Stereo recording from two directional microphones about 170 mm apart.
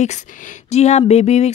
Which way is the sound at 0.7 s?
40° left (ahead or behind).